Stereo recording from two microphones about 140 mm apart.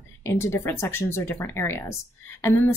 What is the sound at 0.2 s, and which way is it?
Speech, 15° left (ahead or behind).